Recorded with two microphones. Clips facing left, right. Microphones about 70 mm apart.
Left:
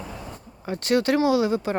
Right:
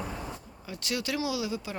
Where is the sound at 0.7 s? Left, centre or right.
Left.